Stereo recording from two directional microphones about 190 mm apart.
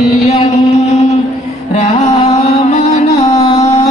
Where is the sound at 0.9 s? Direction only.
35° left (ahead or behind).